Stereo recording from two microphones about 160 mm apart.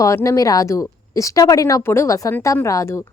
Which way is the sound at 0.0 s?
20° left (ahead or behind).